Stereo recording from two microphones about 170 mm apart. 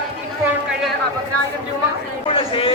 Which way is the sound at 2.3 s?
30° left (ahead or behind).